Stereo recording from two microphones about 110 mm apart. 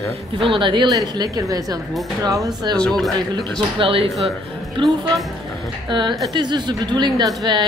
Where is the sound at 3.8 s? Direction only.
55° right (ahead or behind).